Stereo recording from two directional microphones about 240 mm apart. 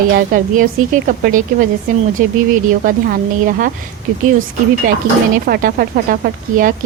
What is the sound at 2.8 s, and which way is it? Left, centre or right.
Speech, right.